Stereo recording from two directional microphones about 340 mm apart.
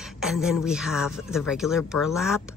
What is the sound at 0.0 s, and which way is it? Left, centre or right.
Speech, centre.